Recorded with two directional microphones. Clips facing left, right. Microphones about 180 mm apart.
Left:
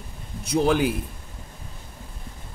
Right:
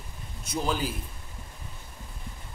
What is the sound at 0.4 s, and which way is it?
Speech, 65° left (ahead or behind).